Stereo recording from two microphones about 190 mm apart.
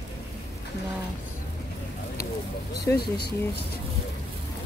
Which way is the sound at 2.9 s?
55° left (ahead or behind).